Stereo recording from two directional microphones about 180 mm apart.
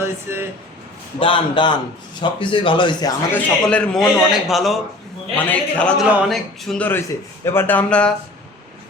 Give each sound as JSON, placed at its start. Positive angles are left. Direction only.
{"t": 0.0, "sound": "speech", "side_deg": -15}
{"t": 1.2, "sound": "speech", "side_deg": 30}
{"t": 3.3, "sound": "a man's voice", "side_deg": 5}